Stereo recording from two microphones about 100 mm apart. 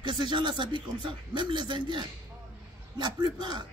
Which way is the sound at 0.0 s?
50° right (ahead or behind).